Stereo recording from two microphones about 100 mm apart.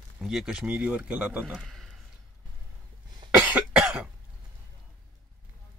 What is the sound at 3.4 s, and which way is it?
Cough, 15° right (ahead or behind).